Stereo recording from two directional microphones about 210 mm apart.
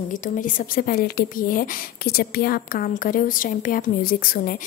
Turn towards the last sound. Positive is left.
turn(degrees=45)  # may be behind; listen again after turning